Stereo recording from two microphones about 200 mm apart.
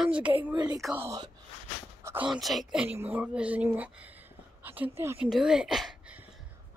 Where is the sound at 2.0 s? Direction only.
15° right (ahead or behind).